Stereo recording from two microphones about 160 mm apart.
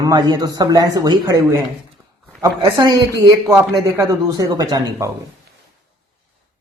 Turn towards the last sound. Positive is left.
turn(degrees=-25)  # may be behind; listen again after turning